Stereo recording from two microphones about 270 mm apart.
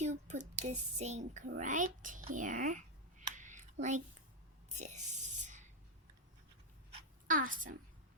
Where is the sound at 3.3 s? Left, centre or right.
Right.